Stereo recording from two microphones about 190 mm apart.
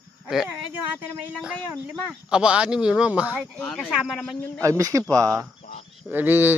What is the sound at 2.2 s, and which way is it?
A man's voice, 5° right (ahead or behind).